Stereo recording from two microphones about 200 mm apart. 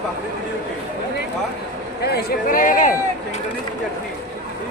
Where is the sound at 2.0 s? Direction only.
50° left (ahead or behind).